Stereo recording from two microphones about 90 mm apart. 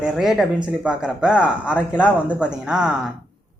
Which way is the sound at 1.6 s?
15° left (ahead or behind).